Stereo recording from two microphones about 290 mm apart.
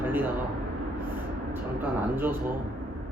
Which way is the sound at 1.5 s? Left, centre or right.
Centre.